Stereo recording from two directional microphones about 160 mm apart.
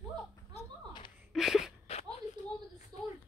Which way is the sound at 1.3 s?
Centre (ahead or behind).